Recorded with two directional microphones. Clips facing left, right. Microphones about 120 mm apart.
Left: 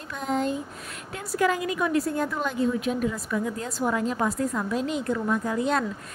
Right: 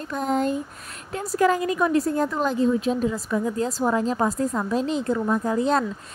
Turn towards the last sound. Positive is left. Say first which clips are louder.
# right 3 dB
turn(degrees=-35)  # may be behind; listen again after turning